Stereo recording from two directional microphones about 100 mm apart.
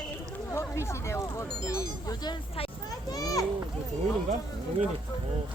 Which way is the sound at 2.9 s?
40° left (ahead or behind).